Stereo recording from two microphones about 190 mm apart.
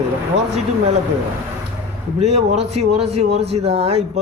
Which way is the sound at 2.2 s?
35° right (ahead or behind).